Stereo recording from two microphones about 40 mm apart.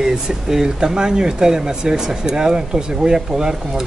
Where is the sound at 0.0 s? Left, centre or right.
Centre.